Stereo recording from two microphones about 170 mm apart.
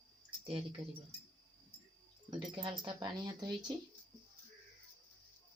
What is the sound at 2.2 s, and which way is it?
Speech, 25° right (ahead or behind).